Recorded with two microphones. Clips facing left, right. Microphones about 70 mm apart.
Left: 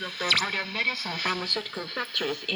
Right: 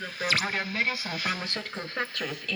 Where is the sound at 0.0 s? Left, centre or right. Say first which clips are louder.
Left 1 dB; left.